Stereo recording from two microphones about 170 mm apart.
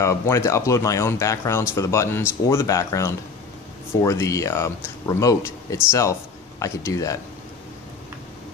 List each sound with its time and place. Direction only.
0.0 s speech: 15° left (ahead or behind)